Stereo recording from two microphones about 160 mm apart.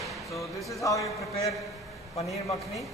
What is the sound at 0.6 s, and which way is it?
Speech, 20° left (ahead or behind).